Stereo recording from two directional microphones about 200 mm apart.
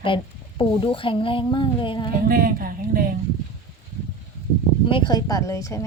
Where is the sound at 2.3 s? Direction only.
45° right (ahead or behind).